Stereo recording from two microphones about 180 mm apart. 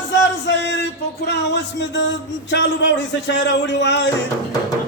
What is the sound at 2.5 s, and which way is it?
Speech, 85° left.